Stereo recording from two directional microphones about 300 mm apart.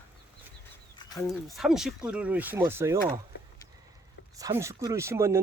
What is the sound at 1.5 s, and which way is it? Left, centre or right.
Speech, centre.